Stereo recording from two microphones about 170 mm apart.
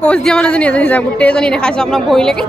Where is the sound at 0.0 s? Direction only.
5° left (ahead or behind).